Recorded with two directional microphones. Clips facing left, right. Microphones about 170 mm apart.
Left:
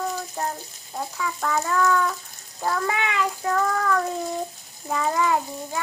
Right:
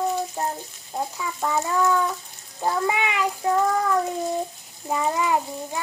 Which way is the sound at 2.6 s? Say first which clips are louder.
Right 2 dB; 15° right (ahead or behind).